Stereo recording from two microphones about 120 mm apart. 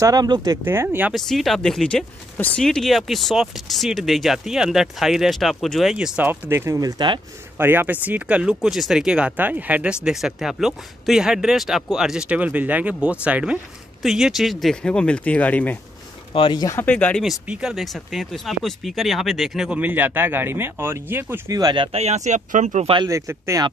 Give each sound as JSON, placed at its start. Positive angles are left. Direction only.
{"t": 0.0, "sound": "speech", "side_deg": -35}
{"t": 0.7, "sound": "speech", "side_deg": -15}
{"t": 1.1, "sound": "speech", "side_deg": 0}
{"t": 6.5, "sound": "speech", "side_deg": -20}
{"t": 7.5, "sound": "speech", "side_deg": -20}
{"t": 16.3, "sound": "speech", "side_deg": 45}
{"t": 16.8, "sound": "speech", "side_deg": 10}
{"t": 17.2, "sound": "speech", "side_deg": -5}
{"t": 19.8, "sound": "speech", "side_deg": -15}
{"t": 21.5, "sound": "speech", "side_deg": -35}
{"t": 21.9, "sound": "speech", "side_deg": -70}
{"t": 23.0, "sound": "speech", "side_deg": -25}